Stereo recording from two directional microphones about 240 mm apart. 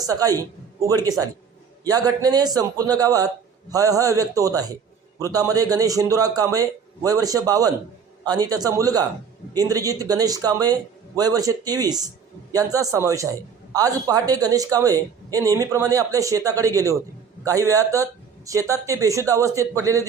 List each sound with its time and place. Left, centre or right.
0.1 s speech: centre